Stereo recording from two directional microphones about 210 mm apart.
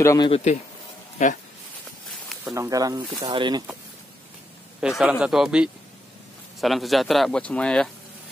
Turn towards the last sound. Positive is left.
turn(degrees=5)  # may be behind; listen again after turning